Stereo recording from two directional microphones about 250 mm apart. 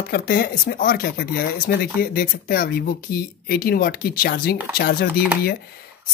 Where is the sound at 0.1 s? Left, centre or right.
Left.